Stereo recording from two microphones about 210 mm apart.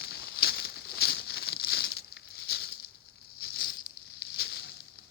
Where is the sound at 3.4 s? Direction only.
50° left (ahead or behind).